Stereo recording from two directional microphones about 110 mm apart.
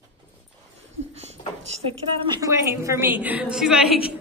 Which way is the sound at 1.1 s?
80° right.